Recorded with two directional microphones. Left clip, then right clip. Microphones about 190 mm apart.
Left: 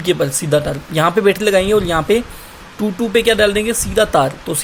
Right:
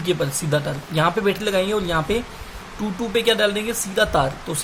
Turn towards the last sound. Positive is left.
turn(degrees=35)  # may be behind; listen again after turning